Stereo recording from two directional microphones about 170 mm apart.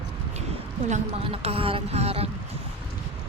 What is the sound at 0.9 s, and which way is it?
A woman's voice, 40° right (ahead or behind).